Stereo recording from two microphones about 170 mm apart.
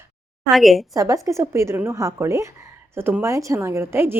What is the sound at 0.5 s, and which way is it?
Speech, centre (ahead or behind).